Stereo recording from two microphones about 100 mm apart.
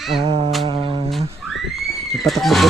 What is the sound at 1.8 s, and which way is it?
Neigh, centre (ahead or behind).